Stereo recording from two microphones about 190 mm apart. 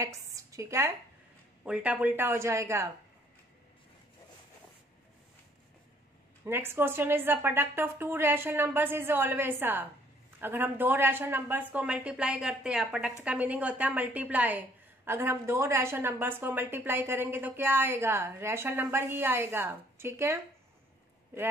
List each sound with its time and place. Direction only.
0.0 s a woman's voice: 15° right (ahead or behind)
6.4 s a woman's voice: 10° right (ahead or behind)